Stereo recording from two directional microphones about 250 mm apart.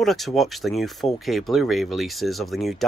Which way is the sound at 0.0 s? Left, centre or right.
Centre.